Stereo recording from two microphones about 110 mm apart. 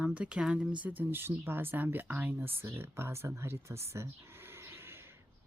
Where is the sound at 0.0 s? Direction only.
15° right (ahead or behind).